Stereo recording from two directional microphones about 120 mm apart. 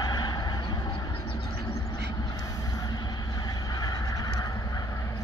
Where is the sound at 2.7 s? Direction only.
35° left (ahead or behind).